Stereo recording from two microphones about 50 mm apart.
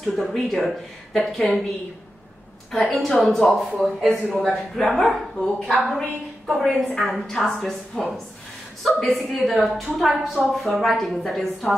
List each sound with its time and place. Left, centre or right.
0.1 s a woman's voice: centre
2.7 s a woman's voice: centre